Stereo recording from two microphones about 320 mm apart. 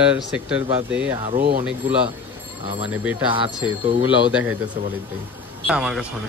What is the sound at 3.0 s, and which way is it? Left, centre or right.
Speech, centre.